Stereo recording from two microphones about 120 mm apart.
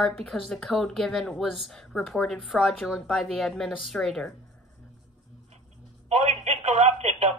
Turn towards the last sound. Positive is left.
turn(degrees=-65)  # may be behind; listen again after turning